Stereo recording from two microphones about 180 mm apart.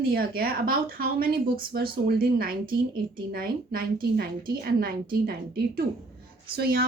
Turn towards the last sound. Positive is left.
turn(degrees=-60)  # may be behind; listen again after turning